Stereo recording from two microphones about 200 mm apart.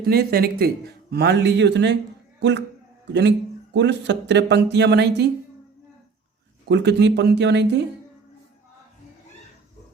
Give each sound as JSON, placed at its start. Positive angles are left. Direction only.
{"t": 0.0, "sound": "speech", "side_deg": -50}
{"t": 6.7, "sound": "speech", "side_deg": -60}